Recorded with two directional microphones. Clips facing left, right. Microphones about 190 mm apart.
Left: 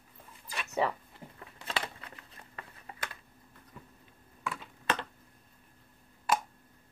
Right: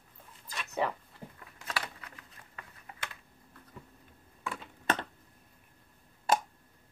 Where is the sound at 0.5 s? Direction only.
5° left (ahead or behind).